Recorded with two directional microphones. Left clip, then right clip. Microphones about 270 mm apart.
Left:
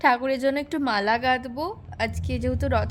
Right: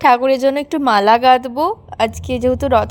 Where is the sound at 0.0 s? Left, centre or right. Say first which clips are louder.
Right 9 dB; right.